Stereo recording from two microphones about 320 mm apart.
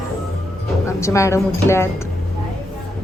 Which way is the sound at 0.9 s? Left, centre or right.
Centre.